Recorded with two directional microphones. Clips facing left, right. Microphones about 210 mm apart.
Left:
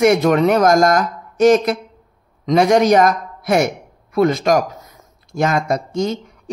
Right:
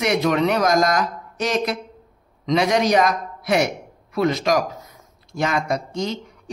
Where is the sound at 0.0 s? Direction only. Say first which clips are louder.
Left 6 dB; 50° left (ahead or behind).